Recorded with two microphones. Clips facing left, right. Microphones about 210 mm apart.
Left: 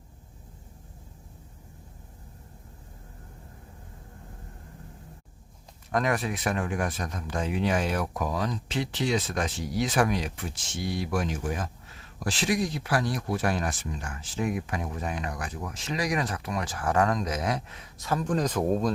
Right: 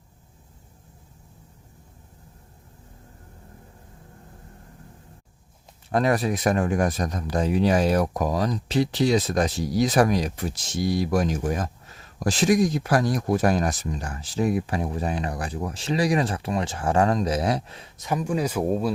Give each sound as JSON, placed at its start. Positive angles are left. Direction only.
{"t": 5.9, "sound": "speech", "side_deg": -35}
{"t": 17.9, "sound": "speech", "side_deg": -15}